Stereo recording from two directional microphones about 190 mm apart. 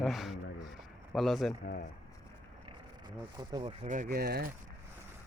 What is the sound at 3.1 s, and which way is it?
Speech, 25° right (ahead or behind).